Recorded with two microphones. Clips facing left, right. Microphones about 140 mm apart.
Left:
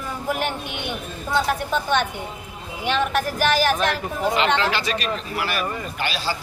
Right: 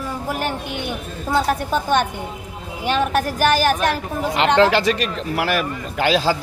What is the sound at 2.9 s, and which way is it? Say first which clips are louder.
A woman's voice: right 3 dB; 45° right (ahead or behind).